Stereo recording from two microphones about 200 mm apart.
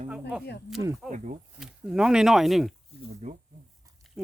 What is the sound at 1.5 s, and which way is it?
Speech, 5° right (ahead or behind).